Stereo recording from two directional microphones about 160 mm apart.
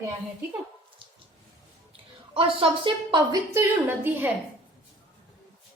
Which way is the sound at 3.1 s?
25° right (ahead or behind).